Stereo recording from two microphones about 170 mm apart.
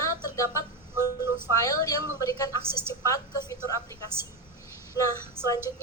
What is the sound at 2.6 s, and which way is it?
Speech, 15° right (ahead or behind).